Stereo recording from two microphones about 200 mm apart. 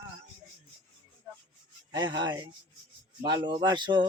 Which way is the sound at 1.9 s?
20° right (ahead or behind).